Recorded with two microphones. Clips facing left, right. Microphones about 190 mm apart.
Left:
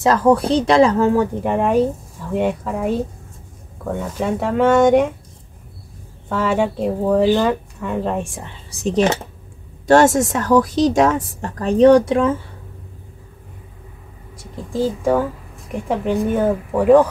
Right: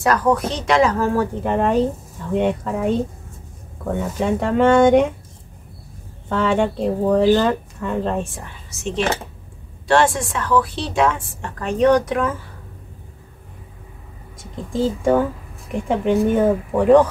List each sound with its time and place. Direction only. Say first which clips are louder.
0.0 s speech: left 3 dB; 25° left (ahead or behind); by 5.0 s 5° left (ahead or behind)
6.2 s speech: even; 5° left (ahead or behind)
8.5 s a woman's voice: left 5 dB; 35° left (ahead or behind)
14.4 s speech: even; centre (ahead or behind)